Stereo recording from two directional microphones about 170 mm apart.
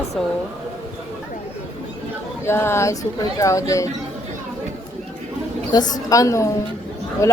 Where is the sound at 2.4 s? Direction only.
15° left (ahead or behind).